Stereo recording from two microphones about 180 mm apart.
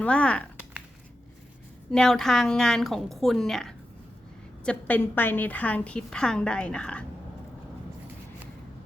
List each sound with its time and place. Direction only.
0.0 s a woman's voice: 5° left (ahead or behind)
1.9 s a woman's voice: 5° left (ahead or behind)